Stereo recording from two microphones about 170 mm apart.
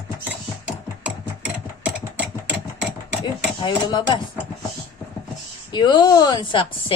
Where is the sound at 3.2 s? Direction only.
25° left (ahead or behind).